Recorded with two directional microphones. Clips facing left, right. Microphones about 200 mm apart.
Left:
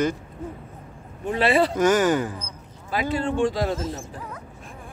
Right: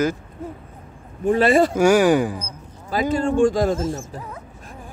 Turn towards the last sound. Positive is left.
turn(degrees=-45)  # may be behind; listen again after turning